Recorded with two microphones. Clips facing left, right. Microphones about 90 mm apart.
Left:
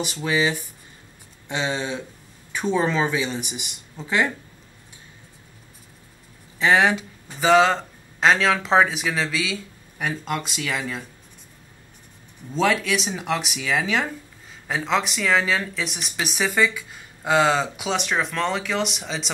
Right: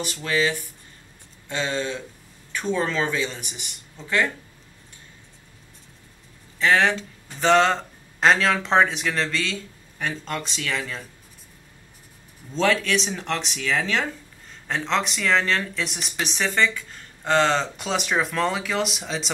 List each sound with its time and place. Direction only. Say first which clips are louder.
0.0 s speech: left 1 dB; 15° left (ahead or behind)
6.6 s speech: left 1 dB; 15° left (ahead or behind)
12.5 s speech: even; 5° left (ahead or behind)